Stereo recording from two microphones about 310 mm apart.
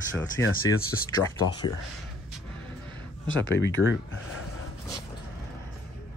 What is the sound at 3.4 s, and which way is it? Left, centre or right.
Speech, left.